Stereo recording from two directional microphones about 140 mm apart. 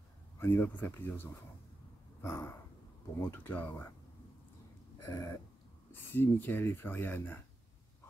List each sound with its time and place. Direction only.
0.4 s speech: 15° left (ahead or behind)
5.0 s a sound: 25° left (ahead or behind)
5.9 s speech: 15° left (ahead or behind)